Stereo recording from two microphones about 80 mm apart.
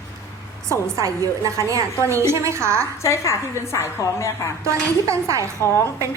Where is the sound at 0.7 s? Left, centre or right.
Right.